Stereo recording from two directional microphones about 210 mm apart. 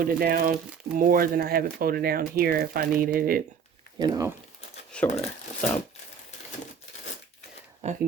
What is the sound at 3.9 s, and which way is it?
Speech, 20° right (ahead or behind).